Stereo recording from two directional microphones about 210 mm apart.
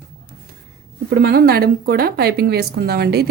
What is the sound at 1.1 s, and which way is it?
Speech, 50° right (ahead or behind).